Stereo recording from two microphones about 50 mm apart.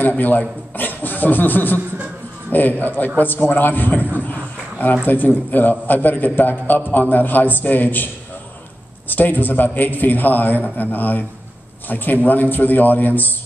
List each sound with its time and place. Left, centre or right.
0.0 s a man's voice: left
3.2 s a sound: left
5.0 s a man's voice: left
9.1 s a man's voice: left